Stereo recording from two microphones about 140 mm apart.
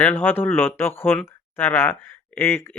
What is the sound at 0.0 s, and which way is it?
Speech, 15° left (ahead or behind).